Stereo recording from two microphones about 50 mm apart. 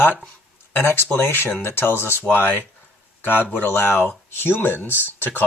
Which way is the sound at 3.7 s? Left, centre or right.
Left.